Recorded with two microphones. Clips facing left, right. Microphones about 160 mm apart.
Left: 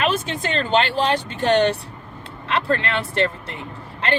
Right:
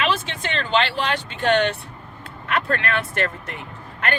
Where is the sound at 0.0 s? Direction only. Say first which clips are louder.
Left 2 dB; 40° left (ahead or behind).